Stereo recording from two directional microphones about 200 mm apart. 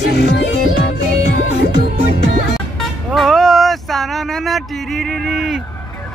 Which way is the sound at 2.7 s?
Centre (ahead or behind).